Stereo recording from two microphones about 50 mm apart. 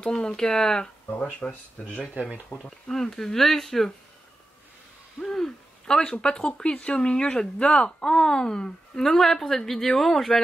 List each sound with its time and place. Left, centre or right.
0.0 s speech: centre
5.2 s a sound: centre
6.2 s speech: centre